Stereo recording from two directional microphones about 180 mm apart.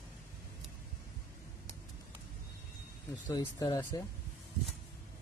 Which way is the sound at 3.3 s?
20° left (ahead or behind).